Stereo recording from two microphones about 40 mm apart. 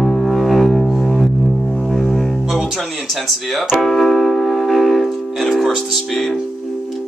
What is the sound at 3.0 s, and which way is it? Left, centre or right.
Speech, centre.